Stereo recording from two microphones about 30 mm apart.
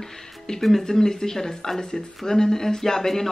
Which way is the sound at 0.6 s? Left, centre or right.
Centre.